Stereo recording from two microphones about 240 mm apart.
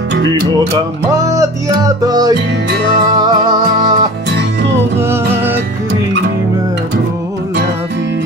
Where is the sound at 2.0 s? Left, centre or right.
Centre.